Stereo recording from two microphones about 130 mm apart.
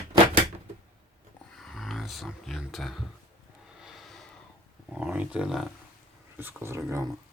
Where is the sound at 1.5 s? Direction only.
Centre (ahead or behind).